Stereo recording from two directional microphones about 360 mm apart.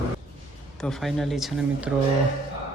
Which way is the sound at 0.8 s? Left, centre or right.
Centre.